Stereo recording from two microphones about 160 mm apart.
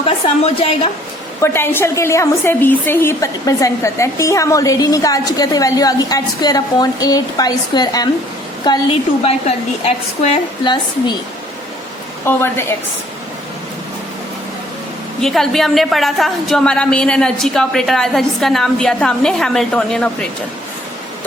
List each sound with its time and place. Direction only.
0.0 s a woman's voice: 35° left (ahead or behind)
1.4 s a woman's voice: 15° left (ahead or behind)
9.2 s a woman's voice: 40° left (ahead or behind)
10.6 s a woman's voice: 30° left (ahead or behind)
12.2 s a woman's voice: 15° left (ahead or behind)
15.2 s a woman's voice: centre (ahead or behind)